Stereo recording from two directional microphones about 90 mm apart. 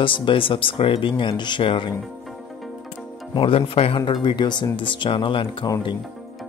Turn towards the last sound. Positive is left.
turn(degrees=75)  # may be behind; listen again after turning